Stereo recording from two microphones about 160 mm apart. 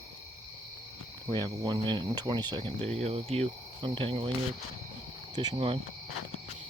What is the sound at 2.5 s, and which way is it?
Cricket, 35° right (ahead or behind).